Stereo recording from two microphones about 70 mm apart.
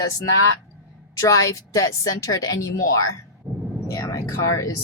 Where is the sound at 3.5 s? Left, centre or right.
Centre.